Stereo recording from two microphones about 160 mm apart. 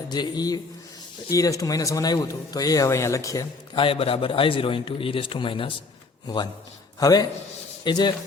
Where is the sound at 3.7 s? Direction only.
35° left (ahead or behind).